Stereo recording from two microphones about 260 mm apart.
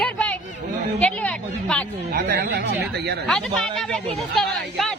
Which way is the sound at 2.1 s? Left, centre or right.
Right.